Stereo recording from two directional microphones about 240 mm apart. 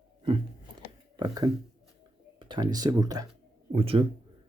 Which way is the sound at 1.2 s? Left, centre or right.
Centre.